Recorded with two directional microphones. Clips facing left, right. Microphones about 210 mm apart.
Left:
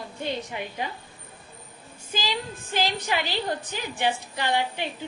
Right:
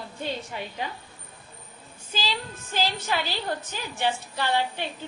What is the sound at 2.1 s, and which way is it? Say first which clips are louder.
A woman's voice: left 2 dB; 15° left (ahead or behind).